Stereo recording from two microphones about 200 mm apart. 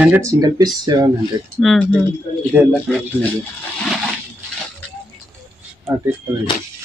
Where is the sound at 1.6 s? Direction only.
5° left (ahead or behind).